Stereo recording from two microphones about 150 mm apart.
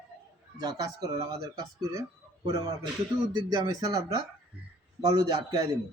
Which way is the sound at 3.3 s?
25° right (ahead or behind).